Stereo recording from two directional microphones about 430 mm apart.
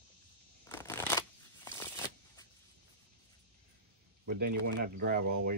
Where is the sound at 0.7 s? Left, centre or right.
Centre.